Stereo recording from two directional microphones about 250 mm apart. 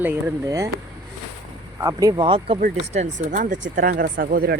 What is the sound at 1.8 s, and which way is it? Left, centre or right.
Speech, centre.